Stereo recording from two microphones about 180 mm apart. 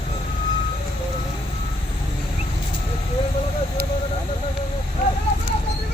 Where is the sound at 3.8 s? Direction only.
60° right (ahead or behind).